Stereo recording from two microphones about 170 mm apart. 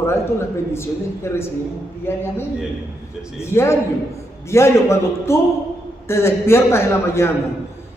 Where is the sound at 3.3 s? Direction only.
15° left (ahead or behind).